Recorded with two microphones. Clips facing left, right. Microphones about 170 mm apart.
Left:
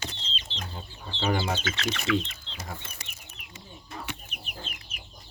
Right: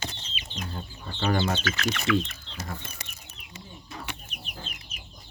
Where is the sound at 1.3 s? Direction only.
10° left (ahead or behind).